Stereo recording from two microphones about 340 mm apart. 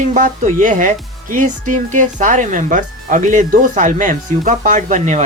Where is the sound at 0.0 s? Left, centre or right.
Right.